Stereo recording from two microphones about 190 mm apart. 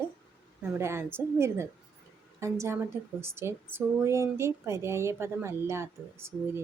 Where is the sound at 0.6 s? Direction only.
15° right (ahead or behind).